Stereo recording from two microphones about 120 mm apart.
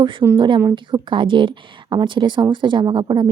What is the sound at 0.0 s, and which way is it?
A woman's voice, 45° right (ahead or behind).